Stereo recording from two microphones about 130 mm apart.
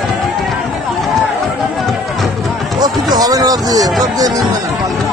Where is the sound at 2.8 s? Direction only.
30° right (ahead or behind).